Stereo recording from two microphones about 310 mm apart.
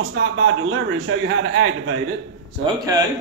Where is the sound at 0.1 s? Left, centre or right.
Right.